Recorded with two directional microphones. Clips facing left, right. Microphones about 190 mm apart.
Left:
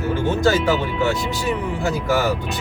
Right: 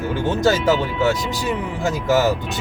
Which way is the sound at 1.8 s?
20° right (ahead or behind).